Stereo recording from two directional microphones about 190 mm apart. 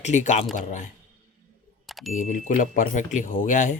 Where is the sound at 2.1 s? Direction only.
40° left (ahead or behind).